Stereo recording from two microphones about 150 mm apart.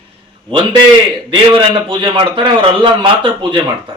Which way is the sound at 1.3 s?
35° right (ahead or behind).